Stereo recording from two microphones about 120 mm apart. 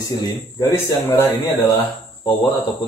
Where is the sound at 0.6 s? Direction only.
25° left (ahead or behind).